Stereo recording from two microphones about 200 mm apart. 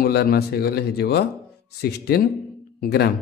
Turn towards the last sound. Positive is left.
turn(degrees=55)  # may be behind; listen again after turning